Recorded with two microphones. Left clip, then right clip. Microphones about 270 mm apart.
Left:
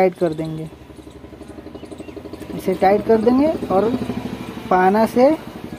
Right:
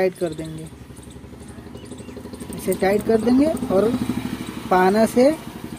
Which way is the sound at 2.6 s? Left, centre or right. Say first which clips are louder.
Left 4 dB; centre.